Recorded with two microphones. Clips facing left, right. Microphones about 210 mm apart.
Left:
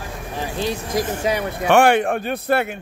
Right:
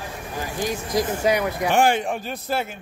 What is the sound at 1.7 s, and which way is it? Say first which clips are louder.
Speech: left 6 dB; 65° left (ahead or behind).